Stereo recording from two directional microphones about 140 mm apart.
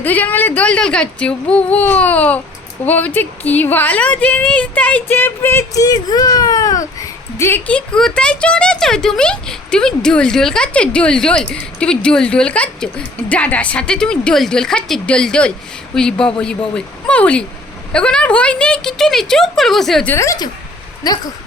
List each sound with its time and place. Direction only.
0.0 s speech: 15° left (ahead or behind)
20.1 s a woman's voice: 20° left (ahead or behind)